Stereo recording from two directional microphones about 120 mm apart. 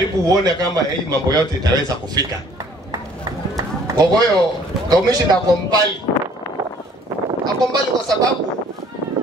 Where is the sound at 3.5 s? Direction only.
30° right (ahead or behind).